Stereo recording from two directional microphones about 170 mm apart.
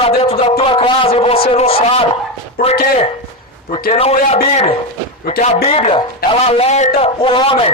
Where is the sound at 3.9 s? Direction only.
40° left (ahead or behind).